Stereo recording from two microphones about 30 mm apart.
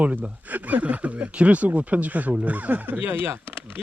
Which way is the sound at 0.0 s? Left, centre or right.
Right.